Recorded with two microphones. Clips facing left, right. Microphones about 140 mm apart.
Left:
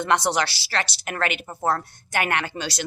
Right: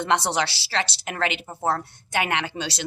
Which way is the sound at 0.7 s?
20° right (ahead or behind).